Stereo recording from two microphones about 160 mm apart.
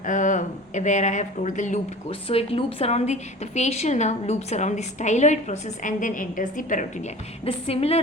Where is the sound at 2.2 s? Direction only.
35° left (ahead or behind).